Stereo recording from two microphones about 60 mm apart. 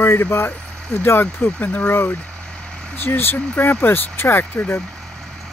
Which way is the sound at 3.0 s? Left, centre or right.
Left.